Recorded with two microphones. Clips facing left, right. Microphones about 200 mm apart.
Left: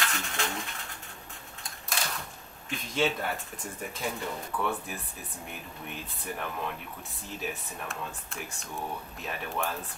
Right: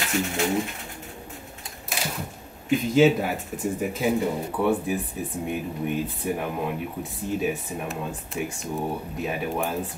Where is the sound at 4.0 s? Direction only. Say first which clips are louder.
Right 9 dB; 20° right (ahead or behind).